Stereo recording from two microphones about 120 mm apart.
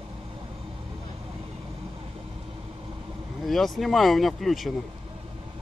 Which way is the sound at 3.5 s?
Centre (ahead or behind).